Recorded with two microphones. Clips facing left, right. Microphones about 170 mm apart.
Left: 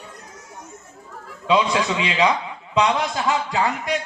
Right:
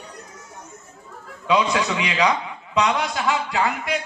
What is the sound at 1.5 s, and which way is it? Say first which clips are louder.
Speech: left 1 dB; 25° left (ahead or behind).